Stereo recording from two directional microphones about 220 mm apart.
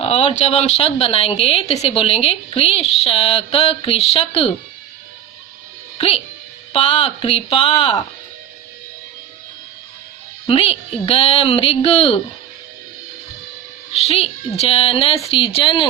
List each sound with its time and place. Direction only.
0.0 s a woman's voice: 25° left (ahead or behind)
6.0 s a woman's voice: 25° left (ahead or behind)
10.4 s a woman's voice: 25° left (ahead or behind)
13.9 s a woman's voice: 30° left (ahead or behind)